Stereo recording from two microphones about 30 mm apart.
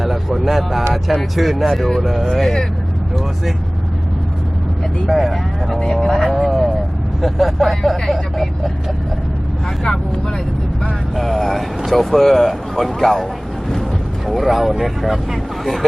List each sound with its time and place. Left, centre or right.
0.0 s speech: centre
5.0 s speech: centre
5.6 s speech: centre
5.9 s speech: left
6.3 s speech: centre
11.1 s speech: centre
14.3 s speech: centre